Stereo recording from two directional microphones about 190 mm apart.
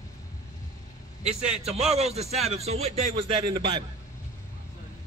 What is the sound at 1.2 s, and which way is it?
Speech, 5° right (ahead or behind).